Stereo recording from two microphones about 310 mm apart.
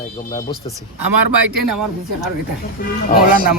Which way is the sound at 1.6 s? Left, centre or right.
Right.